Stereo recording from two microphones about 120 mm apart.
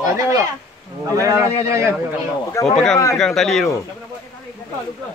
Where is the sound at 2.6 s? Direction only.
25° left (ahead or behind).